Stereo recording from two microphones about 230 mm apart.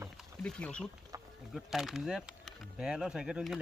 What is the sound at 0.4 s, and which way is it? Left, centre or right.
Speech, centre.